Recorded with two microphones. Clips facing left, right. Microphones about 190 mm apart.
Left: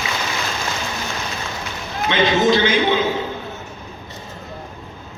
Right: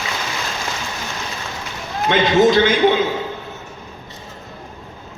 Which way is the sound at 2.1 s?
45° right (ahead or behind).